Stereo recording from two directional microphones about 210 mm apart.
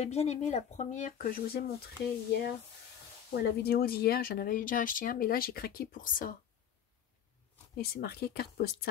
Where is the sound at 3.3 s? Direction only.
45° left (ahead or behind).